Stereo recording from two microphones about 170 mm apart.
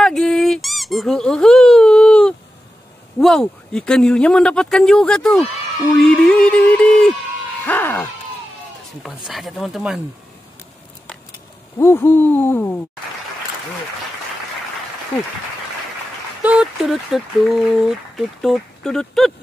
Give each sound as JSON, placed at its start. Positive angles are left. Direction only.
{"t": 0.0, "sound": "squeak", "side_deg": 0}
{"t": 3.2, "sound": "speech", "side_deg": 0}
{"t": 7.6, "sound": "hoot", "side_deg": 10}
{"t": 9.0, "sound": "speech", "side_deg": 0}
{"t": 11.8, "sound": "hoot", "side_deg": 15}
{"t": 16.4, "sound": "speech", "side_deg": -5}